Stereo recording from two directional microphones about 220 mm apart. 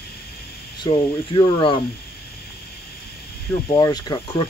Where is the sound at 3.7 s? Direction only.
15° left (ahead or behind).